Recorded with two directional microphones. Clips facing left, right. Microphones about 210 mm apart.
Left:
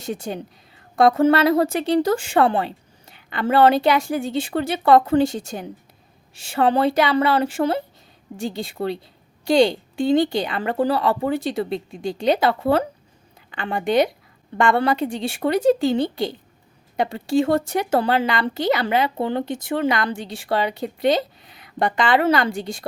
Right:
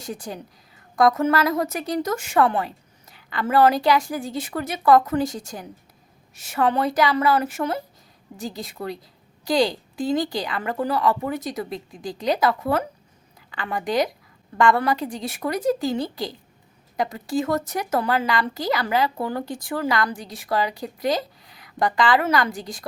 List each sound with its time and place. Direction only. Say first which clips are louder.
0.0 s a woman's voice: left 5 dB; 25° left (ahead or behind)